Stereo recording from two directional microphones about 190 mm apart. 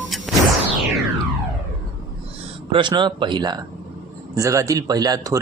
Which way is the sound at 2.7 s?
25° right (ahead or behind).